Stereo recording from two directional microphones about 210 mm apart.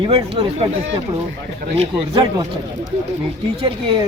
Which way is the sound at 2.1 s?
25° right (ahead or behind).